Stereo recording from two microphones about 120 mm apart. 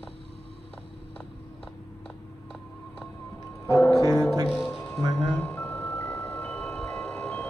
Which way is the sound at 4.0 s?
30° right (ahead or behind).